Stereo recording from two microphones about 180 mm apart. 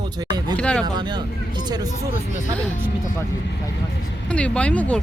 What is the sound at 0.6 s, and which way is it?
Speech, 5° left (ahead or behind).